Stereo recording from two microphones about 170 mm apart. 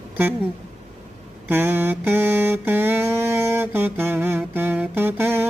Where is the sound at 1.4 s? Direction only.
10° right (ahead or behind).